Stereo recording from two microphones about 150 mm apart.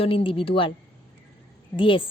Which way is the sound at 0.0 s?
35° left (ahead or behind).